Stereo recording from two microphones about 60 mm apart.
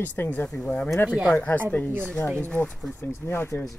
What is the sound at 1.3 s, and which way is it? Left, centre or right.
Speech, left.